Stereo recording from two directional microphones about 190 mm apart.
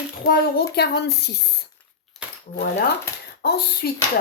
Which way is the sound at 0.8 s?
60° left (ahead or behind).